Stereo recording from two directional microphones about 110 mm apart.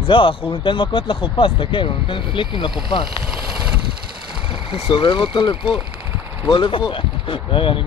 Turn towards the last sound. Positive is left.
turn(degrees=50)  # may be behind; listen again after turning